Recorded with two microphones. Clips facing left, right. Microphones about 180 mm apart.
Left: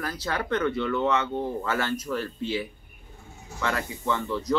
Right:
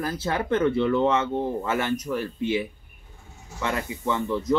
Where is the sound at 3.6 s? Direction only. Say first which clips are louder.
Right 1 dB; 20° right (ahead or behind).